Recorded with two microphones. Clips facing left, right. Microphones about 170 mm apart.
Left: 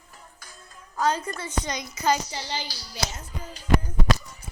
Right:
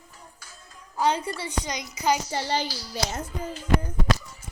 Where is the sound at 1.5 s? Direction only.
15° right (ahead or behind).